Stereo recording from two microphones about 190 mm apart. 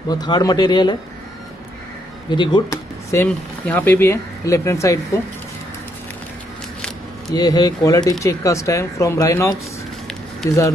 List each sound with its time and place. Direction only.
0.1 s speech: 20° left (ahead or behind)
2.3 s speech: 25° left (ahead or behind)
7.3 s speech: 20° left (ahead or behind)